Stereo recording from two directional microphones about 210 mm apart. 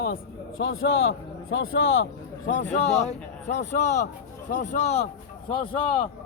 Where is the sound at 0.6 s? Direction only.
70° left (ahead or behind).